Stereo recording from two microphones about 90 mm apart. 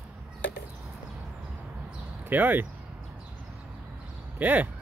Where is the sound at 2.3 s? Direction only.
20° right (ahead or behind).